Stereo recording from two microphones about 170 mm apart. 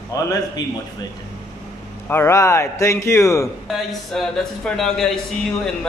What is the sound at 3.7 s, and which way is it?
Speech, centre (ahead or behind).